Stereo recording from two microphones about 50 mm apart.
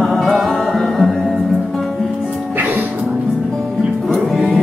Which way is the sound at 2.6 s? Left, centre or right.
Right.